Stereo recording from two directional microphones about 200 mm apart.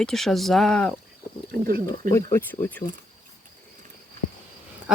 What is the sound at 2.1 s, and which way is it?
Speech, 10° left (ahead or behind).